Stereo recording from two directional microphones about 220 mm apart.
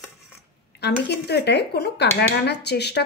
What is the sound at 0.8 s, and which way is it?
Speech, 50° left (ahead or behind).